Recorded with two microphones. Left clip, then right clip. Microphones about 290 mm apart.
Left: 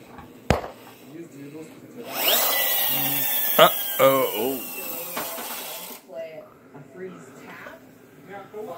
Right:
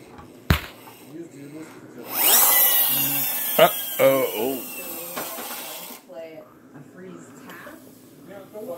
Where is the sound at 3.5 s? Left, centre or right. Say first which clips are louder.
Left 1 dB; centre.